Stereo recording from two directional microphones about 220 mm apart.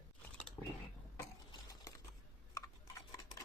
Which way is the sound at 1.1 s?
15° left (ahead or behind).